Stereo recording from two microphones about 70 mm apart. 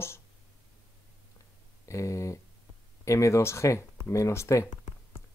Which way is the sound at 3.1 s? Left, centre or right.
Left.